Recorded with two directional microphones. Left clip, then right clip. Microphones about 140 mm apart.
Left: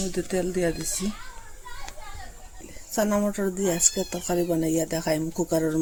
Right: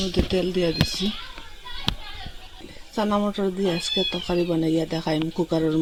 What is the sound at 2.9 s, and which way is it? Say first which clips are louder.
Speech: right 1 dB; 25° right (ahead or behind).